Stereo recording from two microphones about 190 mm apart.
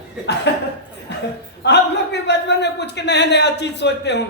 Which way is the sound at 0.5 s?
65° left (ahead or behind).